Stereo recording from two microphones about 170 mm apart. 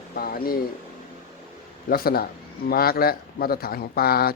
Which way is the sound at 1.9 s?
65° left (ahead or behind).